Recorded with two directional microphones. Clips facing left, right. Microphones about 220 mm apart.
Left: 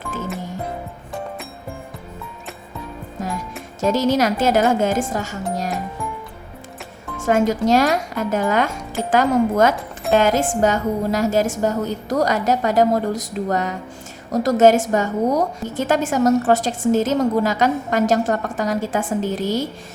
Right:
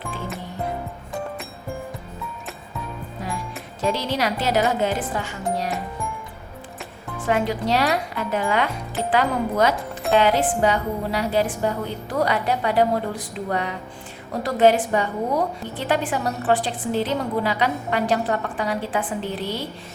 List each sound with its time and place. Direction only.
3.2 s music: 45° left (ahead or behind)
3.8 s a woman's voice: 45° left (ahead or behind)
7.3 s a woman's voice: 45° left (ahead or behind)